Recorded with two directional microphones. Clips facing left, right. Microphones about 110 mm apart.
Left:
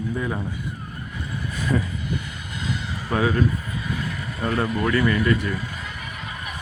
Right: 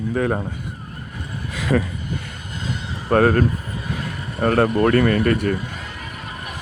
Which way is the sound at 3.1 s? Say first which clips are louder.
Right 6 dB; 55° right (ahead or behind).